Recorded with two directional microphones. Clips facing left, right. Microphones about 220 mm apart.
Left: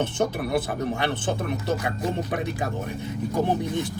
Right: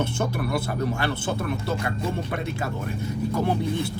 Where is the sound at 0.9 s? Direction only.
20° left (ahead or behind).